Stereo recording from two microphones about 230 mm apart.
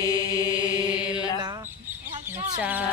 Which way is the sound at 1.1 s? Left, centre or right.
Centre.